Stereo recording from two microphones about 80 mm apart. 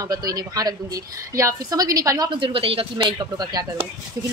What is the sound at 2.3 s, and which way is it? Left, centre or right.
Speech, right.